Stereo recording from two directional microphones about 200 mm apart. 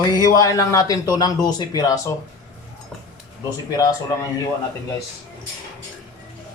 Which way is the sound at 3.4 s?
20° left (ahead or behind).